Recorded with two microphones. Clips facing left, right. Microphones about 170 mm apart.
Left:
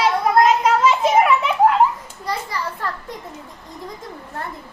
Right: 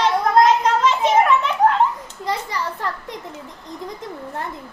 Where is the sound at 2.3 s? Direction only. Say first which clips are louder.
Right 1 dB; 20° right (ahead or behind).